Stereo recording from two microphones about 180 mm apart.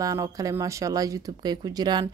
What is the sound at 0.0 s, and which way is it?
Speech, 20° right (ahead or behind).